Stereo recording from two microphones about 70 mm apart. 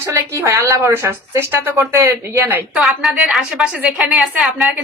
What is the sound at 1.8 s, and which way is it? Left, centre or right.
Speech, right.